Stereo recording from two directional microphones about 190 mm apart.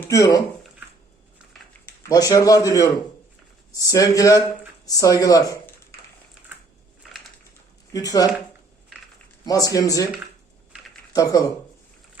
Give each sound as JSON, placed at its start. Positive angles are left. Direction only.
{"t": 0.1, "sound": "speech", "side_deg": 20}
{"t": 2.0, "sound": "a man's voice", "side_deg": 20}
{"t": 7.9, "sound": "a man's voice", "side_deg": 20}
{"t": 9.5, "sound": "a man's voice", "side_deg": 20}
{"t": 11.1, "sound": "speech", "side_deg": 20}